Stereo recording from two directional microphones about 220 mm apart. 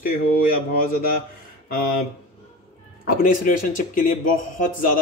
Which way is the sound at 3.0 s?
40° left (ahead or behind).